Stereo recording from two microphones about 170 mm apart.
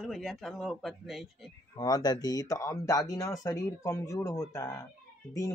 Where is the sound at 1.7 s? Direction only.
20° left (ahead or behind).